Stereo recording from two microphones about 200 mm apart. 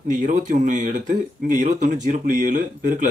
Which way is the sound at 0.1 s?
40° right (ahead or behind).